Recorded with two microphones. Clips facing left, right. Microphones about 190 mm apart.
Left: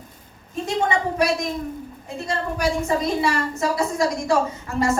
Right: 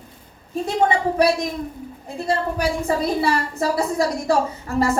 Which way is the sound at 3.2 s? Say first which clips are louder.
Right 1 dB; 35° right (ahead or behind).